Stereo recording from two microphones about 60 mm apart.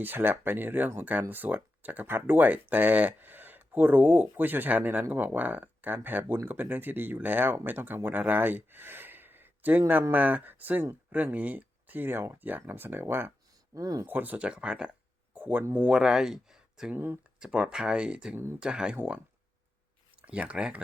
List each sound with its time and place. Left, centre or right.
0.0 s speech: right
13.7 s speech: right
14.1 s speech: right
14.3 s speech: centre
15.4 s speech: right
15.9 s speech: centre
16.9 s speech: right
17.4 s speech: centre
20.2 s speech: right